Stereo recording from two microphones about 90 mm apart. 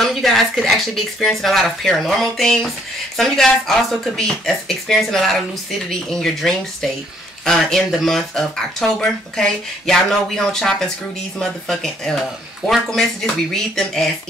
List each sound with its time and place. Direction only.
0.0 s speech: centre (ahead or behind)